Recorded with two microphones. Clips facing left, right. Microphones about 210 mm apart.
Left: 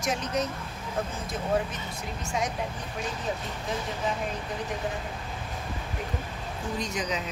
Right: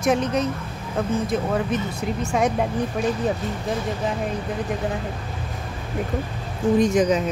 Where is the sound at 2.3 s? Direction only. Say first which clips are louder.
Right 9 dB; 60° right (ahead or behind).